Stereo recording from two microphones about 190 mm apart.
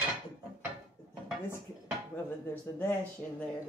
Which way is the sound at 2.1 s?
10° left (ahead or behind).